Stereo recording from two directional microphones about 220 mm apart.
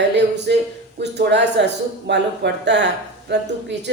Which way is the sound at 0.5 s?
50° right (ahead or behind).